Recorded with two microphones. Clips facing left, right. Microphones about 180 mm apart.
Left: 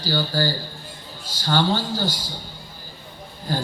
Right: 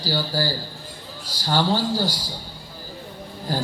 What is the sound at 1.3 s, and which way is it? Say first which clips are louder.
Speech: even; 35° right (ahead or behind).